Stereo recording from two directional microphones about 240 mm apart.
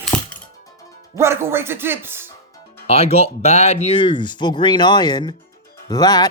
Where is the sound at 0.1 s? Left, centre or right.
Centre.